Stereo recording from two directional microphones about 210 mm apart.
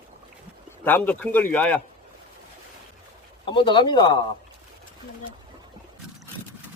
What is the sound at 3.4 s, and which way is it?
Speech, 25° left (ahead or behind).